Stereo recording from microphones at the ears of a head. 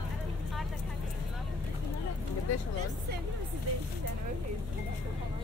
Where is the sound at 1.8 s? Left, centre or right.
Left.